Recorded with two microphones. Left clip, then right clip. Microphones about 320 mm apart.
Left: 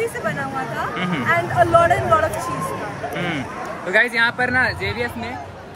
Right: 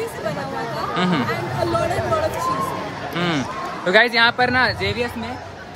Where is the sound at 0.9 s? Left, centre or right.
Centre.